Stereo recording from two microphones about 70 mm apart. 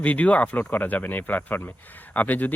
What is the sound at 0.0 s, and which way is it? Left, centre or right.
Speech, left.